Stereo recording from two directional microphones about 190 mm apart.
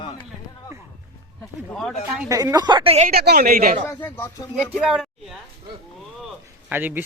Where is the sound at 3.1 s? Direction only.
55° right (ahead or behind).